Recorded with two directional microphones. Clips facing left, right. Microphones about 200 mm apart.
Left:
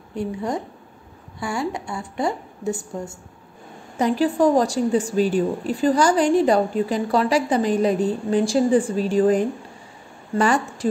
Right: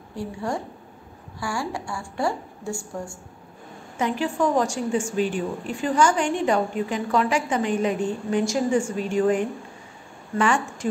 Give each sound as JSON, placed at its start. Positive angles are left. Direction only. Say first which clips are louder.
{"t": 0.1, "sound": "a woman's voice", "louder": "left 3 dB", "side_deg": 20}
{"t": 3.9, "sound": "a woman's voice", "louder": "left 5 dB", "side_deg": 35}